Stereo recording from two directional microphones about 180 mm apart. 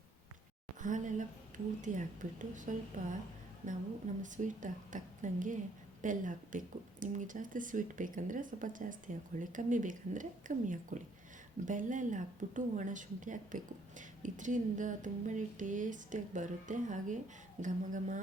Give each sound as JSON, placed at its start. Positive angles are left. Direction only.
{"t": 0.8, "sound": "speech", "side_deg": -45}